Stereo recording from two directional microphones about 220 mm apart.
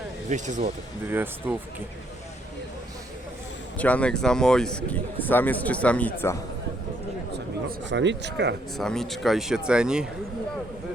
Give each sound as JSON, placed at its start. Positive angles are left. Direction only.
{"t": 0.3, "sound": "speech", "side_deg": -35}
{"t": 1.1, "sound": "speech", "side_deg": -10}
{"t": 3.8, "sound": "speech", "side_deg": 5}
{"t": 7.3, "sound": "a man's voice", "side_deg": -50}
{"t": 8.8, "sound": "speech", "side_deg": 0}